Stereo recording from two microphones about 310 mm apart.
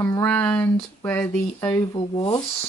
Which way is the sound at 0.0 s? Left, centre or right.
Centre.